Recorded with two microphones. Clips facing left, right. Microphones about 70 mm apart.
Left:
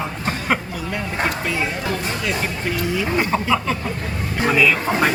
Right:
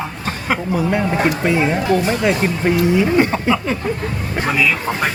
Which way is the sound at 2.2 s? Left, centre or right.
Right.